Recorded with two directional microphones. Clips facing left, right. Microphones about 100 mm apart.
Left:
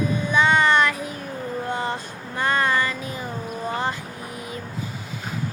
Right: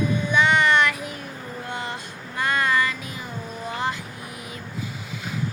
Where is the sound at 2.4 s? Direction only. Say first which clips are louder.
Left 1 dB; 35° left (ahead or behind).